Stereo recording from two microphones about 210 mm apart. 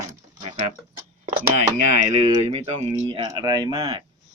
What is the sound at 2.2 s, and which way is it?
Speech, 30° right (ahead or behind).